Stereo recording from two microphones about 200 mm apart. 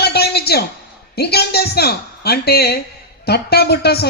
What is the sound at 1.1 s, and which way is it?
A woman's voice, 55° left (ahead or behind).